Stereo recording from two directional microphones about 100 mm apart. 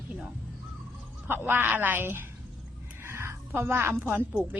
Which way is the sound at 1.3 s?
20° right (ahead or behind).